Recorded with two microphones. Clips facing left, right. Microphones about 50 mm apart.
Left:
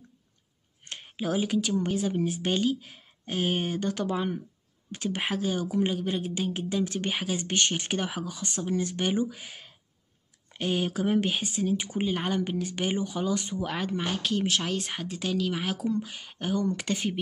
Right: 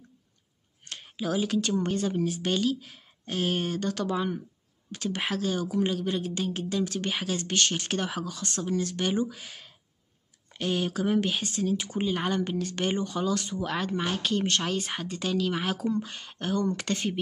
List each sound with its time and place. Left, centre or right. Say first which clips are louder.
0.8 s a sound: even; centre
1.6 s speech: even; centre
2.2 s speech: even; left
13.7 s speech: right 2 dB; centre